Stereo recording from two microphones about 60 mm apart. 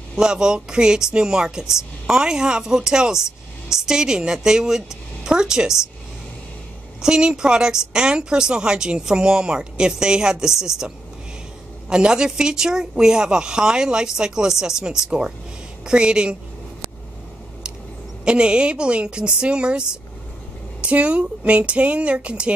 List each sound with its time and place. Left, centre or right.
0.1 s speech: centre
7.0 s speech: centre
11.9 s speech: centre
18.2 s speech: centre
20.8 s speech: right